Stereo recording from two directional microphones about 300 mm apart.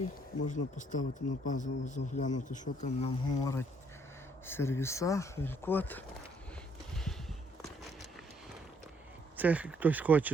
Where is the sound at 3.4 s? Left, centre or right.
Centre.